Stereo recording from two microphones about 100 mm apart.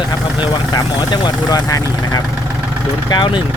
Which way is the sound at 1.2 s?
40° left (ahead or behind).